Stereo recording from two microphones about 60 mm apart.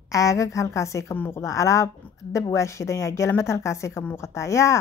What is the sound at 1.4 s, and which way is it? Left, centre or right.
Speech, left.